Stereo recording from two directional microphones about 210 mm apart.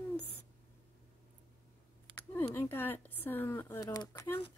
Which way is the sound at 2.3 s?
10° left (ahead or behind).